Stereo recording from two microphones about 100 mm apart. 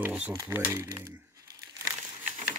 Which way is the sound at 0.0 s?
15° right (ahead or behind).